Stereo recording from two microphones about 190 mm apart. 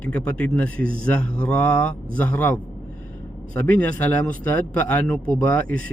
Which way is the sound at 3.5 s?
10° left (ahead or behind).